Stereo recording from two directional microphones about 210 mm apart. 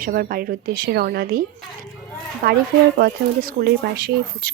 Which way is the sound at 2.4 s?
45° right (ahead or behind).